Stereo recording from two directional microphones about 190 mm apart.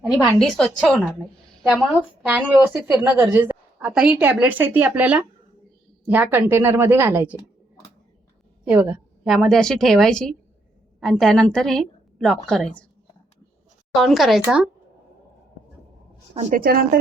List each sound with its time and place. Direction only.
0.0 s a woman's voice: 5° right (ahead or behind)
8.7 s a woman's voice: 10° right (ahead or behind)
13.9 s a woman's voice: centre (ahead or behind)
16.3 s a woman's voice: 35° right (ahead or behind)
16.6 s speech: 50° right (ahead or behind)